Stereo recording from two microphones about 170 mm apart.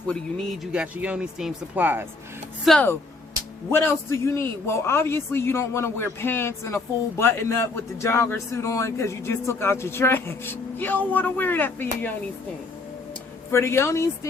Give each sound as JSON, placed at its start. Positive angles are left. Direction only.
{"t": 0.1, "sound": "speech", "side_deg": 0}
{"t": 2.6, "sound": "a man's voice", "side_deg": 10}
{"t": 13.5, "sound": "a man's voice", "side_deg": 15}